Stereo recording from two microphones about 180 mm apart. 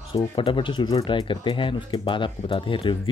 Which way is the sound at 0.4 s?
30° left (ahead or behind).